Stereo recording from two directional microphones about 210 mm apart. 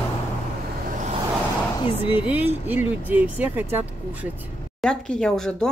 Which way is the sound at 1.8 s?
25° left (ahead or behind).